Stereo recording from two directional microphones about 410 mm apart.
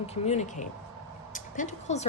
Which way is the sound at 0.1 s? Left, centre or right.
Centre.